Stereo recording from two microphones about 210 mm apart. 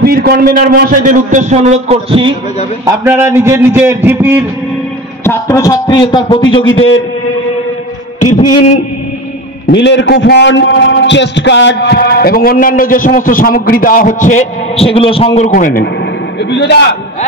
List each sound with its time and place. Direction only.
0.0 s a man's voice: 45° right (ahead or behind); by 2.3 s 25° right (ahead or behind)
2.8 s a man's voice: 15° right (ahead or behind)
5.2 s a man's voice: 15° left (ahead or behind)
6.6 s a man's voice: 70° left (ahead or behind)
9.7 s a man's voice: 55° left (ahead or behind)
16.4 s a man's voice: 55° left (ahead or behind)